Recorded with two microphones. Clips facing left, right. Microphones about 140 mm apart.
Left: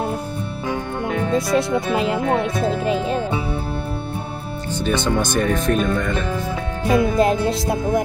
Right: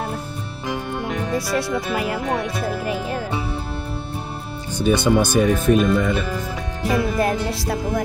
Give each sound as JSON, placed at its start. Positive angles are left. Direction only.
{"t": 1.3, "sound": "speech", "side_deg": 25}
{"t": 4.7, "sound": "speech", "side_deg": -10}
{"t": 6.9, "sound": "speech", "side_deg": 20}